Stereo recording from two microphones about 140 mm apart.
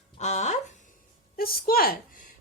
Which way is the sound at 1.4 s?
90° left.